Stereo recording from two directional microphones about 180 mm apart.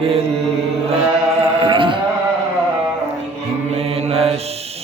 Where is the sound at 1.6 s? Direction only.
30° right (ahead or behind).